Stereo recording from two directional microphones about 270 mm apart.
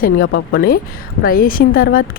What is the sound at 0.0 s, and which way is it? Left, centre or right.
Speech, left.